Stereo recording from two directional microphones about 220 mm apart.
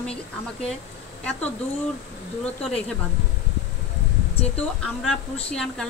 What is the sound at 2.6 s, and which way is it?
Speech, 5° left (ahead or behind).